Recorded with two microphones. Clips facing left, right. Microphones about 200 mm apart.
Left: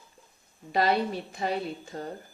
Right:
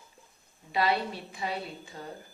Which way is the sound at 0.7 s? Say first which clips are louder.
Left 3 dB; 45° left (ahead or behind).